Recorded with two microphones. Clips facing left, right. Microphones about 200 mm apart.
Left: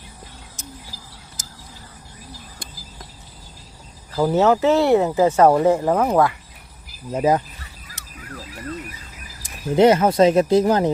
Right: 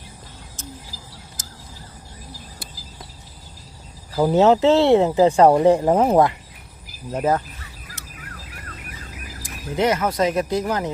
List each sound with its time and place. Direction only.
4.1 s speech: 15° right (ahead or behind)
7.1 s speech: 10° left (ahead or behind)
9.4 s speech: 30° left (ahead or behind)